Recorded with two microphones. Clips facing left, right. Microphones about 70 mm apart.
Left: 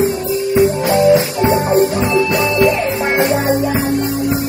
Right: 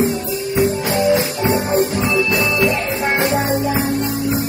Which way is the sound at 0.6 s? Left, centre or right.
Left.